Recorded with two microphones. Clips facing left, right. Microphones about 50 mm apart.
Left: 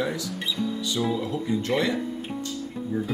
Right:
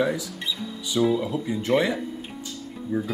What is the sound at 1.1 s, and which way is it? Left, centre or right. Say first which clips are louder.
Speech: right 1 dB; centre.